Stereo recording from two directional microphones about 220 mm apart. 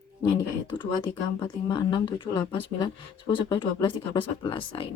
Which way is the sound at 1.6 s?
20° left (ahead or behind).